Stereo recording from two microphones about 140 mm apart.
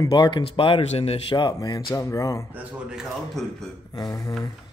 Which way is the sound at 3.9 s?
25° left (ahead or behind).